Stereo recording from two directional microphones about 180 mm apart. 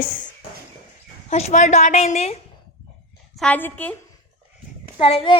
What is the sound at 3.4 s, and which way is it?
Speech, 10° left (ahead or behind).